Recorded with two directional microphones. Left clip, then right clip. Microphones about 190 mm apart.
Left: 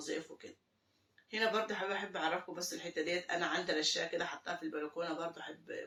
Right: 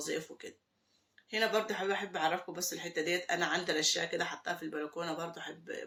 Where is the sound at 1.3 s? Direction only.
50° right (ahead or behind).